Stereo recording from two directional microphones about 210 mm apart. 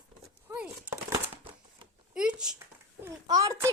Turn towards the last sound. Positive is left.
turn(degrees=-15)  # may be behind; listen again after turning